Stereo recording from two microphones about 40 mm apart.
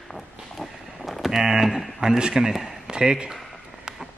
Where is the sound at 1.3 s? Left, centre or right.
Centre.